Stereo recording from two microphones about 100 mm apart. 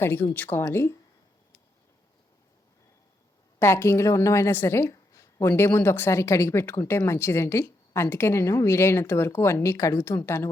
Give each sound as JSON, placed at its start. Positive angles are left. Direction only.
{"t": 0.0, "sound": "a woman's voice", "side_deg": 20}
{"t": 3.6, "sound": "a woman's voice", "side_deg": 25}